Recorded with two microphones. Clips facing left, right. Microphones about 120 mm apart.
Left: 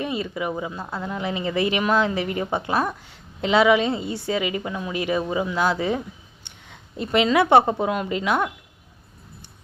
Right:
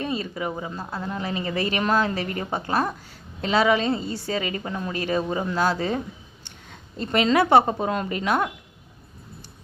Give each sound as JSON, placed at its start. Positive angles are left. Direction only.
{"t": 0.0, "sound": "a woman's voice", "side_deg": 15}